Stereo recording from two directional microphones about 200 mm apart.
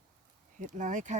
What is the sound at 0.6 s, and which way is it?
Speech, 40° right (ahead or behind).